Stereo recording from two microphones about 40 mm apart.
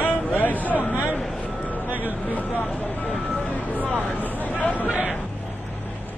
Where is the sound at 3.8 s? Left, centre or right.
Right.